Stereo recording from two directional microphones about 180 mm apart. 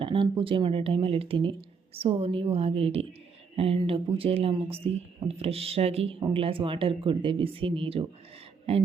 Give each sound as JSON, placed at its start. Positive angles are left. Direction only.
{"t": 0.0, "sound": "speech", "side_deg": -30}